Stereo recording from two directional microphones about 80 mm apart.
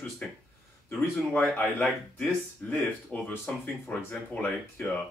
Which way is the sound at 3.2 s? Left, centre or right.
Left.